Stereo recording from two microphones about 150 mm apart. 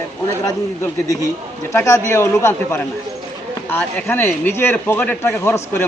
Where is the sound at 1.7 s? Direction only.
20° left (ahead or behind).